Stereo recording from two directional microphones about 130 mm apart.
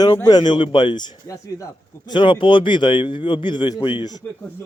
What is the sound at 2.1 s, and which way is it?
Speech, 40° left (ahead or behind).